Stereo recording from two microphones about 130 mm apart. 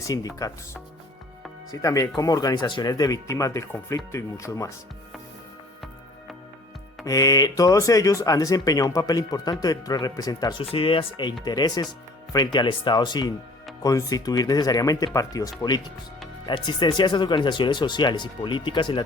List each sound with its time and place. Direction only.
0.0 s speech: 25° left (ahead or behind)
7.0 s speech: 25° left (ahead or behind)
10.6 s speech: 45° left (ahead or behind)